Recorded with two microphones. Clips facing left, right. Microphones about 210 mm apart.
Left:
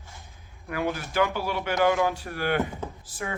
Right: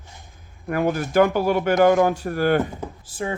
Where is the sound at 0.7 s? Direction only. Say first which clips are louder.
Right 8 dB; 50° right (ahead or behind).